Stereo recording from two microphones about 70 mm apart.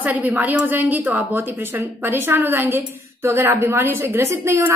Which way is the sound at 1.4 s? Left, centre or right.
Right.